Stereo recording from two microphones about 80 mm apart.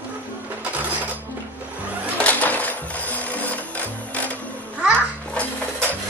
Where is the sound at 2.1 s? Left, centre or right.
Centre.